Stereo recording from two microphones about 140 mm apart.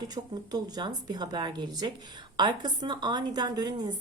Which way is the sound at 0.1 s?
30° right (ahead or behind).